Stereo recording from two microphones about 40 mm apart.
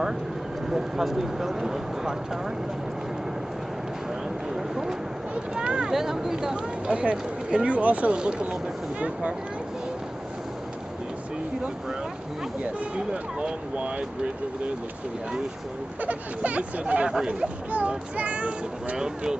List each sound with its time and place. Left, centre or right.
0.7 s speech: centre
4.6 s a sound: centre
5.3 s speech: right
5.9 s speech: centre
6.9 s speech: right
8.2 s speech: right
12.9 s speech: right
16.0 s speech: right
17.1 s speech: right
17.6 s speech: right
18.9 s speech: centre